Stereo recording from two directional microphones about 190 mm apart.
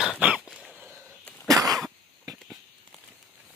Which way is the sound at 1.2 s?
5° left (ahead or behind).